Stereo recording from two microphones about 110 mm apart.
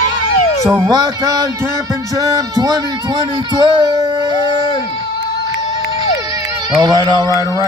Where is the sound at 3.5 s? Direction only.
40° right (ahead or behind).